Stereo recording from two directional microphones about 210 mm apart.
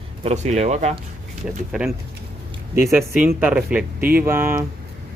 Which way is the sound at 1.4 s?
Centre (ahead or behind).